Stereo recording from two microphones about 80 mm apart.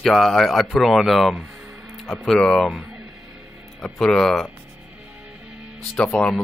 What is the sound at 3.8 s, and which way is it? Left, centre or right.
Speech, centre.